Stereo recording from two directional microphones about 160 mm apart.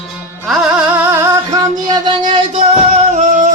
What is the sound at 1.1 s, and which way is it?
Music, 20° right (ahead or behind).